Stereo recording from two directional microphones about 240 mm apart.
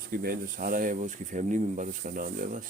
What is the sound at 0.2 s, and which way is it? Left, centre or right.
Speech, right.